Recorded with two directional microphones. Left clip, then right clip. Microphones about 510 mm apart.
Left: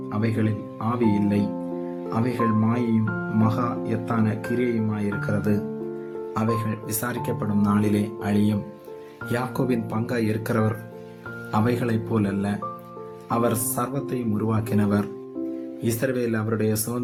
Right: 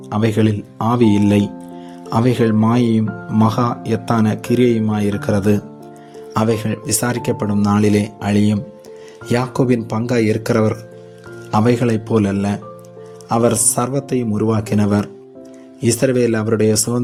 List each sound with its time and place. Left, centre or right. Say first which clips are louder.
0.1 s speech: right 10 dB; centre